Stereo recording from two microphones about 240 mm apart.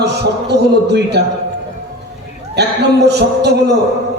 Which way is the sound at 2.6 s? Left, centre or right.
Right.